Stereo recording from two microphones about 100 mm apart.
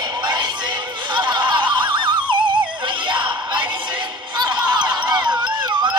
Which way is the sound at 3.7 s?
50° right (ahead or behind).